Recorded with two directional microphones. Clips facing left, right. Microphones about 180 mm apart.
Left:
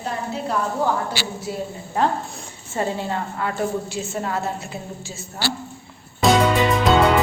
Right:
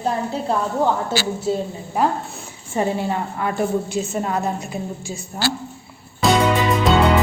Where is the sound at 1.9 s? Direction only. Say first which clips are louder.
Right 1 dB; 10° right (ahead or behind).